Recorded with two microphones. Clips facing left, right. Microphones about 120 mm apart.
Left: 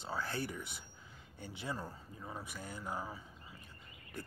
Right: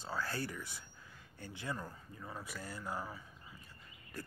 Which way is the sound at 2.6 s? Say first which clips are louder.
Even; centre (ahead or behind).